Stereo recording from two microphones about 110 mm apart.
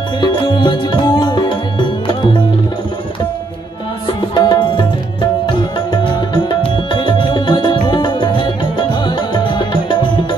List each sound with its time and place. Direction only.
0.2 s music: 50° left (ahead or behind)
4.2 s music: 45° left (ahead or behind)
6.9 s music: 45° left (ahead or behind)